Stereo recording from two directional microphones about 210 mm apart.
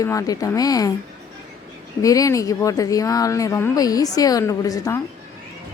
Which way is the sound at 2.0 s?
15° left (ahead or behind).